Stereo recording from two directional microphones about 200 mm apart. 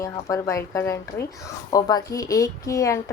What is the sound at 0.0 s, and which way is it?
A woman's voice, 15° left (ahead or behind).